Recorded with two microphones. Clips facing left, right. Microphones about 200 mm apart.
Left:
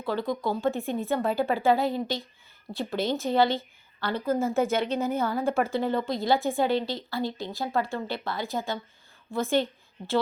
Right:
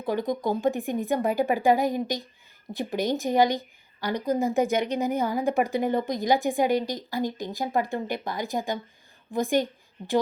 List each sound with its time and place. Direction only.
0.0 s a woman's voice: 20° right (ahead or behind)